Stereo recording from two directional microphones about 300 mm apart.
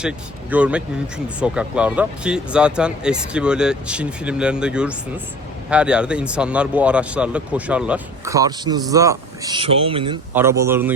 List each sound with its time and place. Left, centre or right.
0.5 s speech: centre
10.6 s speech: centre